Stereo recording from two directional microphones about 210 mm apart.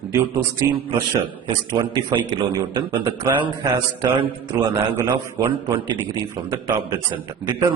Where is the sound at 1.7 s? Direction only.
20° right (ahead or behind).